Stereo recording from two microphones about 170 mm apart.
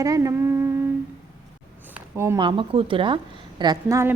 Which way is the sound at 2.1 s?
15° right (ahead or behind).